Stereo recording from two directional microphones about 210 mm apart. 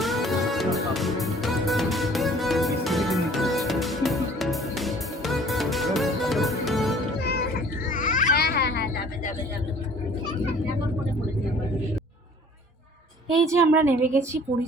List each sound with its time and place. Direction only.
0.0 s music: centre (ahead or behind)
7.2 s music: 50° left (ahead or behind)
7.9 s cat: 40° left (ahead or behind)
13.5 s a woman's voice: 10° right (ahead or behind)